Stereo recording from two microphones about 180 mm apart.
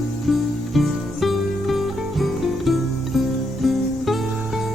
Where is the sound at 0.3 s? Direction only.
Centre (ahead or behind).